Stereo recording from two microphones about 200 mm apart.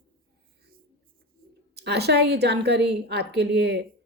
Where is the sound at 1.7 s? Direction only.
55° right (ahead or behind).